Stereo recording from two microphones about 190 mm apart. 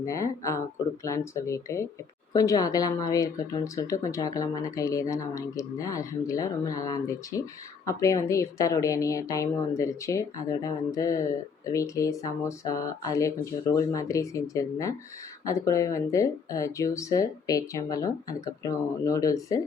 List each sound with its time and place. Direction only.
0.0 s a woman's voice: 15° left (ahead or behind)